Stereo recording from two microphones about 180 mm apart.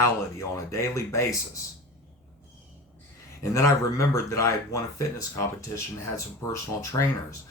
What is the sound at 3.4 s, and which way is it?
Speech, 15° left (ahead or behind).